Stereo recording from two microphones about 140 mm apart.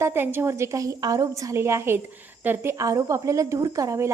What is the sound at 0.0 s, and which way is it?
Speech, 15° right (ahead or behind).